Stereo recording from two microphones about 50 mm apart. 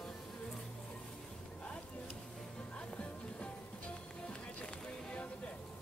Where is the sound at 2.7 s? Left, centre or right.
Left.